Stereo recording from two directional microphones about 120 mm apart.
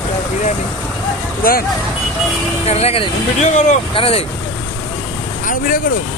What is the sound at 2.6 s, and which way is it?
Speech, 60° left (ahead or behind).